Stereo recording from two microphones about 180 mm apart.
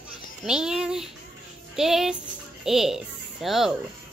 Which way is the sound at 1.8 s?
Centre (ahead or behind).